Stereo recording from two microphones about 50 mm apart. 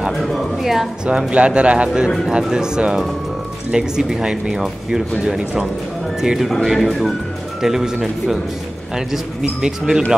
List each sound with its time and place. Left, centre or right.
0.1 s a woman's voice: centre
1.0 s a woman's voice: right